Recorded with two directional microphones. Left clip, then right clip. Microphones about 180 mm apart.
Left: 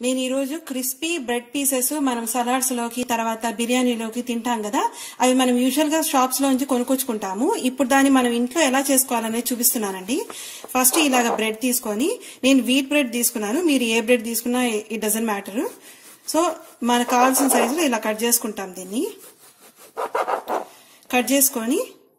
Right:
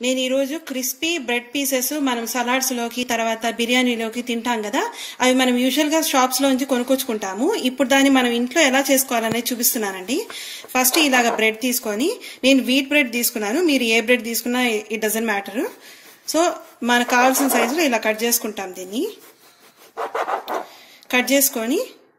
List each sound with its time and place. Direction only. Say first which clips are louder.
0.0 s a woman's voice: right 3 dB; 45° left (ahead or behind)
21.1 s speech: right 2 dB; 45° left (ahead or behind)